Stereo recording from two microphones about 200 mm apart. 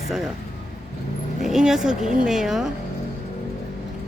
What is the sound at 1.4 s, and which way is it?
Speech, centre (ahead or behind).